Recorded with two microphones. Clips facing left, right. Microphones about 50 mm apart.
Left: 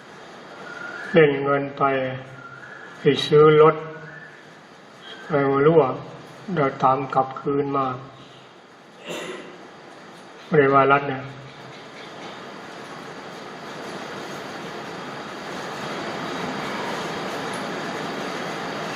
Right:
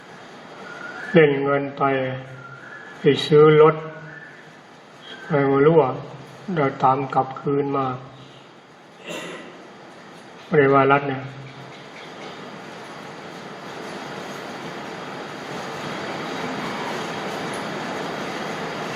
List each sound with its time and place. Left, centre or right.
1.1 s speech: centre
5.3 s speech: centre
10.5 s speech: centre
13.0 s vehicle: centre
15.4 s vehicle: centre
15.9 s vehicle: centre